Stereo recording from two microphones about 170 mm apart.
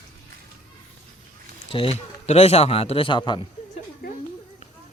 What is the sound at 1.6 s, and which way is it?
A man's voice, 35° left (ahead or behind).